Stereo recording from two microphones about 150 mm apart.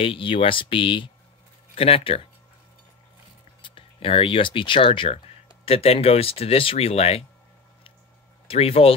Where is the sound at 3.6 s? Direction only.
35° left (ahead or behind).